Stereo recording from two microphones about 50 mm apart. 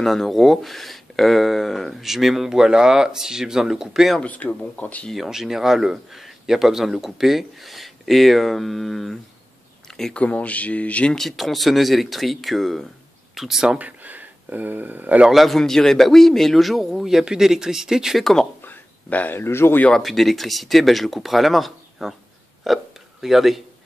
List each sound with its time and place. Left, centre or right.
0.0 s speech: centre
4.2 s speech: left
5.1 s speech: centre
10.1 s speech: left
11.1 s speech: centre
13.7 s speech: right
15.3 s speech: centre
18.2 s speech: centre
18.7 s a sound: left
19.3 s speech: left
20.0 s speech: centre